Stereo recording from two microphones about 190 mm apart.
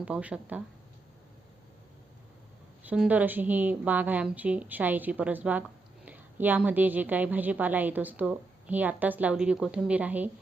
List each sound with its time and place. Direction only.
0.0 s a woman's voice: 5° right (ahead or behind)
2.8 s a woman's voice: 5° right (ahead or behind)